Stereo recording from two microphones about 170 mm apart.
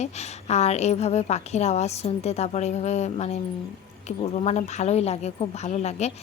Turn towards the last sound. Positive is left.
turn(degrees=40)  # may be behind; listen again after turning